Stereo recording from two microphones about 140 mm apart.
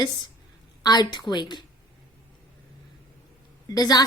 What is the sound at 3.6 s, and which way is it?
Speech, 25° left (ahead or behind).